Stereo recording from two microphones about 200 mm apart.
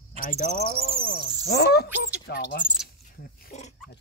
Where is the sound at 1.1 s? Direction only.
55° left (ahead or behind).